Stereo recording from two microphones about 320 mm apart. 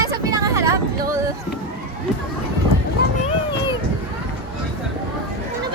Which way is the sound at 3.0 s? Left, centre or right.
Left.